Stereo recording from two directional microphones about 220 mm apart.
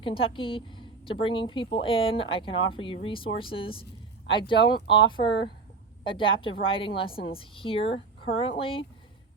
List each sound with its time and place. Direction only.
0.0 s a woman's voice: 25° left (ahead or behind)